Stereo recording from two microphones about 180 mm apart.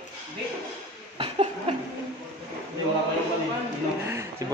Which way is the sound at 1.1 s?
30° right (ahead or behind).